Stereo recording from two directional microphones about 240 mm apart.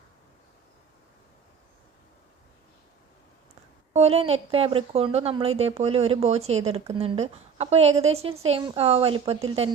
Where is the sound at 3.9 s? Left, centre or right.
Right.